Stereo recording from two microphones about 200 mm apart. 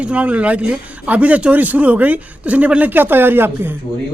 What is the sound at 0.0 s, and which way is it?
A man's voice, 5° right (ahead or behind).